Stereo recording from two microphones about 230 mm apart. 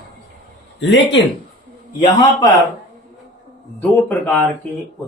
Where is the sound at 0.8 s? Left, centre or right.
Left.